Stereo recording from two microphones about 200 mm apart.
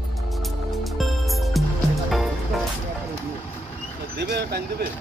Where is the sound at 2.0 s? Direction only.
Centre (ahead or behind).